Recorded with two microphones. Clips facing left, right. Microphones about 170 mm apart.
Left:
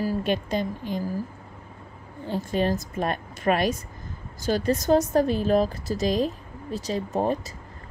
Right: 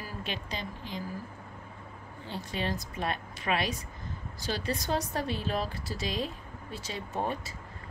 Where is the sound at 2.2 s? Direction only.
45° left (ahead or behind).